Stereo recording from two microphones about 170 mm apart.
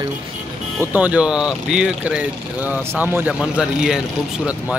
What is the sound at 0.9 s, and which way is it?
A man's voice, 10° right (ahead or behind).